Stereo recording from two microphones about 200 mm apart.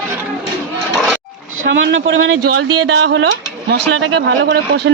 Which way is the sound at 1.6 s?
65° right (ahead or behind).